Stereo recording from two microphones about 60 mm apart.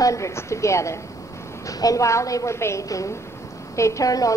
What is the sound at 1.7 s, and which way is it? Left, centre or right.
A woman's voice, left.